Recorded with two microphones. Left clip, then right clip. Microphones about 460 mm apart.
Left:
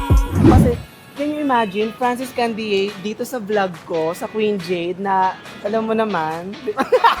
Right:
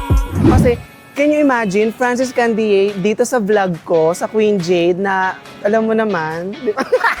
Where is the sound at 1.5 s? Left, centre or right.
Right.